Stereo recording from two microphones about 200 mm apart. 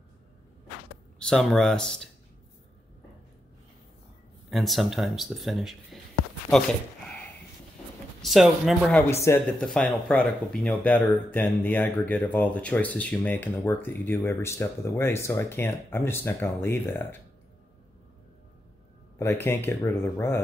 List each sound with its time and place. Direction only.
1.2 s speech: 5° left (ahead or behind)
4.5 s speech: centre (ahead or behind)
8.2 s speech: centre (ahead or behind)
19.1 s speech: 10° left (ahead or behind)